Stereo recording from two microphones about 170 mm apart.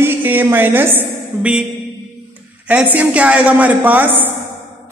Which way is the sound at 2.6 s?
10° right (ahead or behind).